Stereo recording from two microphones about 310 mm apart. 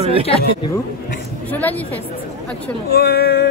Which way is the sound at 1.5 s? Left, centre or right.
Centre.